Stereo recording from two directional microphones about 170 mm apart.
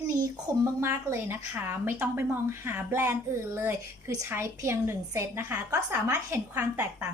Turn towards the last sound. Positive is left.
turn(degrees=-15)  # may be behind; listen again after turning